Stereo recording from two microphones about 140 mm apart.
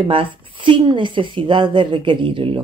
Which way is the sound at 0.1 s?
40° right (ahead or behind).